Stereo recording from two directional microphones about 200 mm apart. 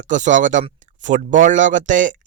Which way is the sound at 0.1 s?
40° right (ahead or behind).